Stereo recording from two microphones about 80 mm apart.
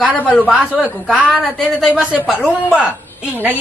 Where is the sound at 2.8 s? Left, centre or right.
Centre.